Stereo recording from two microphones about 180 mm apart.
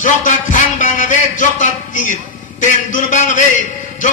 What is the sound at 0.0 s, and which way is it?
A man's voice, 45° left (ahead or behind).